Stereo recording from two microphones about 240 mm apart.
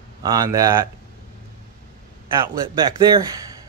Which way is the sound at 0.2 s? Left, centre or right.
Centre.